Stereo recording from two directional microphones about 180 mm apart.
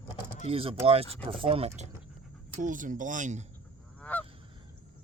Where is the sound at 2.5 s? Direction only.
45° right (ahead or behind).